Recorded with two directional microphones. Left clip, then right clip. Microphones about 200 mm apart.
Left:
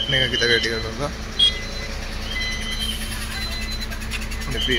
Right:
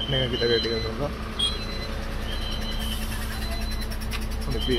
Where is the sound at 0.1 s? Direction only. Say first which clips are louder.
Left 5 dB; 15° right (ahead or behind).